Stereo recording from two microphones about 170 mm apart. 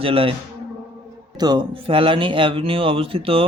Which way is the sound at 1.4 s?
25° right (ahead or behind).